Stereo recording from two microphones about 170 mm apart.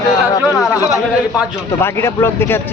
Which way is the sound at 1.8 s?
15° left (ahead or behind).